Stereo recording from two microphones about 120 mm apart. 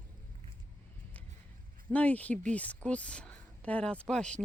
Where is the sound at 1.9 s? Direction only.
10° left (ahead or behind).